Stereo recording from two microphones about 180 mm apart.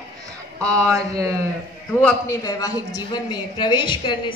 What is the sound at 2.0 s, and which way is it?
A woman's voice, 20° left (ahead or behind).